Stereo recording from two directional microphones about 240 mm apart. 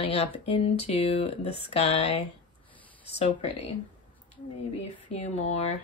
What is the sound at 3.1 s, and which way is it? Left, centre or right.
Speech, left.